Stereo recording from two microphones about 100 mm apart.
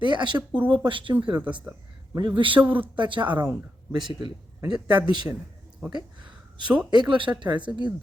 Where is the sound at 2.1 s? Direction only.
55° right (ahead or behind).